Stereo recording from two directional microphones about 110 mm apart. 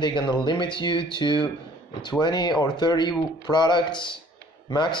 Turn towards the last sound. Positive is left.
turn(degrees=45)  # may be behind; listen again after turning